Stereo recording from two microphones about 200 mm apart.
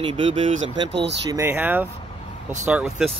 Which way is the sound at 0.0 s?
25° right (ahead or behind).